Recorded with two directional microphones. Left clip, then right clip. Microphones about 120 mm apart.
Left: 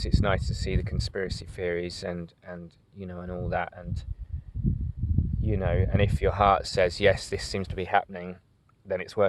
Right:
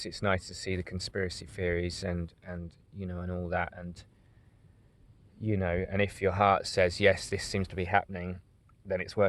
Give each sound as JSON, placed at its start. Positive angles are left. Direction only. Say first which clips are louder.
{"t": 0.0, "sound": "speech", "louder": "left 3 dB", "side_deg": 25}
{"t": 5.4, "sound": "speech", "louder": "left 2 dB", "side_deg": 20}